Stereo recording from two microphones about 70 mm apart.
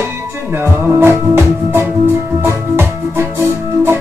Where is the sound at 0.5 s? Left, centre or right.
Right.